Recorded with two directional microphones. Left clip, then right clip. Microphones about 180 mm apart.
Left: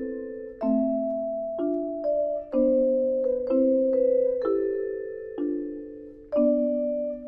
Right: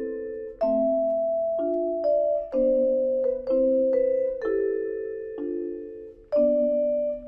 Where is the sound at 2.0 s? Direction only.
30° right (ahead or behind).